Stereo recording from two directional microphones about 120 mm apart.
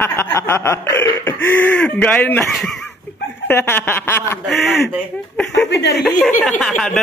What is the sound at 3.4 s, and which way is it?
Speech, 20° left (ahead or behind).